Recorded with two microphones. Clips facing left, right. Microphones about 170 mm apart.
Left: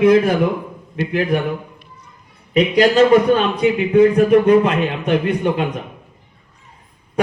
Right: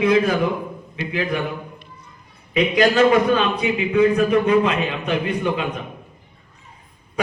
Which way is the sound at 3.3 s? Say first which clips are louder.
Left 4 dB; 45° left (ahead or behind).